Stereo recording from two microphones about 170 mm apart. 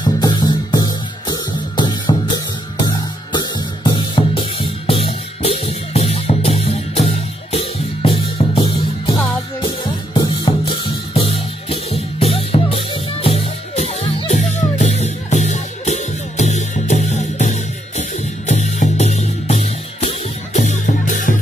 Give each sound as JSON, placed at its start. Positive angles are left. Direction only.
{"t": 0.0, "sound": "music", "side_deg": 25}
{"t": 3.3, "sound": "music", "side_deg": 25}